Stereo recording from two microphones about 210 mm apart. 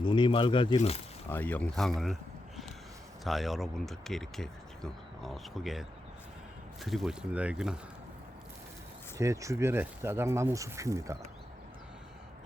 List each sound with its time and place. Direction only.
0.0 s speech: 25° left (ahead or behind)
1.3 s speech: 10° left (ahead or behind)
3.2 s speech: centre (ahead or behind)
6.8 s speech: centre (ahead or behind)
9.1 s speech: 15° right (ahead or behind)